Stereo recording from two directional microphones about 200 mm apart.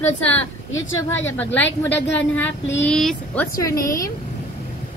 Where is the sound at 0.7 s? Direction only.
75° left (ahead or behind).